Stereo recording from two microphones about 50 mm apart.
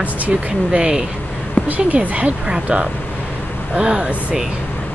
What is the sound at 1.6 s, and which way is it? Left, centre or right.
Speech, right.